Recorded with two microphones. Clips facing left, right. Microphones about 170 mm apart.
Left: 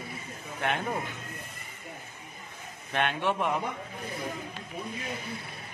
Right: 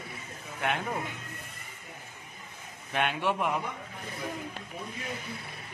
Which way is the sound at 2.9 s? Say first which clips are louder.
Left 1 dB; 5° right (ahead or behind).